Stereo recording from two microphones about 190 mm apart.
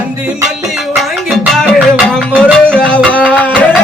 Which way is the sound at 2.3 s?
5° left (ahead or behind).